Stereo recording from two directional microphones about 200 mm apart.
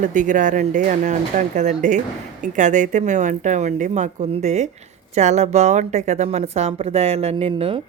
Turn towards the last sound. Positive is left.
turn(degrees=-30)  # may be behind; listen again after turning